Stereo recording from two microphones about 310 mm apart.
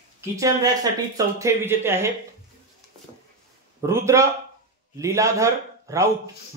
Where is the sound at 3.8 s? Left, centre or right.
Centre.